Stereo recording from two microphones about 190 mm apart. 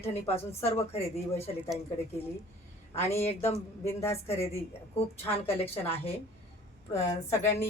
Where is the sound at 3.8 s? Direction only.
15° left (ahead or behind).